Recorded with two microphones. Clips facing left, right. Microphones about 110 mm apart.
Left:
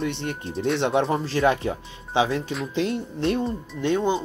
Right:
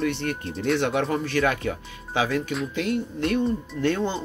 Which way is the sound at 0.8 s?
25° left (ahead or behind).